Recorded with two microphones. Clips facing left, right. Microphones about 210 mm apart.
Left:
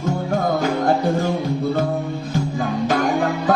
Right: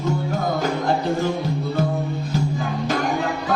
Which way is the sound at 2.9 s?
50° left (ahead or behind).